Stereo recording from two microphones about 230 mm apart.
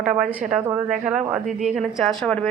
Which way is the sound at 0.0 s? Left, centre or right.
Centre.